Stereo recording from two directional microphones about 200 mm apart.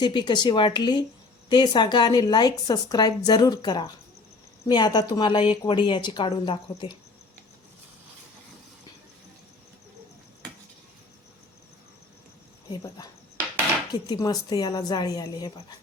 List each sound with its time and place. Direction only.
0.0 s a woman's voice: 20° left (ahead or behind)
12.7 s a woman's voice: 20° left (ahead or behind)